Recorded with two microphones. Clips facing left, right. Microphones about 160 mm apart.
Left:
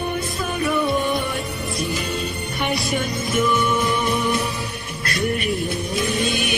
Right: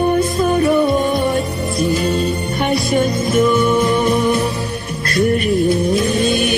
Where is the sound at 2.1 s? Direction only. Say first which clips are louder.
Right 9 dB; 40° right (ahead or behind).